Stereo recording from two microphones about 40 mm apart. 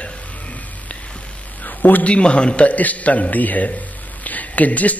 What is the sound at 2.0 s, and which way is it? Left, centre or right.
Speech, left.